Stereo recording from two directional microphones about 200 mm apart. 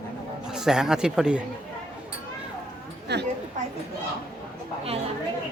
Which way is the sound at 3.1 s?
55° right (ahead or behind).